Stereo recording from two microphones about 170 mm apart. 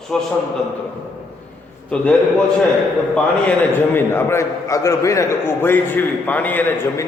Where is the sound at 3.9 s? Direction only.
15° left (ahead or behind).